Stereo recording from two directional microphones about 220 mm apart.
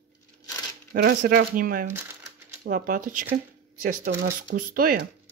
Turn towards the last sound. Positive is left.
turn(degrees=-40)  # may be behind; listen again after turning